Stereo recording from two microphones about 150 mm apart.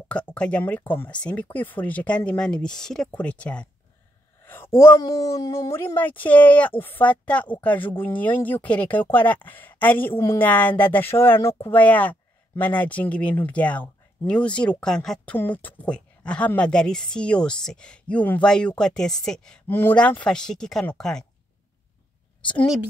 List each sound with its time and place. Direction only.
0.1 s speech: 10° left (ahead or behind)